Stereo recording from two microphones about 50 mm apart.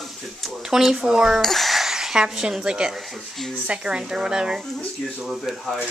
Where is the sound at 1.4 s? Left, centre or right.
Centre.